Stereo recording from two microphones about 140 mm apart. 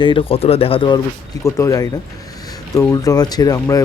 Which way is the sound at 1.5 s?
25° left (ahead or behind).